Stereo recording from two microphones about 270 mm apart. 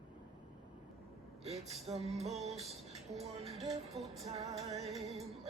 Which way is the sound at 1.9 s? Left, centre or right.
Right.